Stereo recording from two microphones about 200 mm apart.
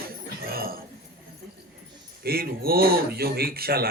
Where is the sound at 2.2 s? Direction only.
50° right (ahead or behind).